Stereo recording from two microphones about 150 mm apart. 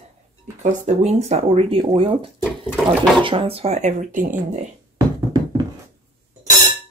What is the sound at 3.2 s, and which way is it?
Speech, 35° right (ahead or behind).